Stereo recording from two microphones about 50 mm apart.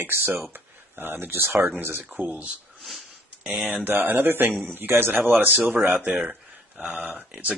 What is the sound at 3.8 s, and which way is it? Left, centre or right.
Speech, right.